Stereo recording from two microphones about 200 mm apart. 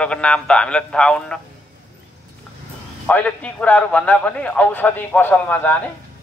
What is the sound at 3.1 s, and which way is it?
Speech, 5° left (ahead or behind).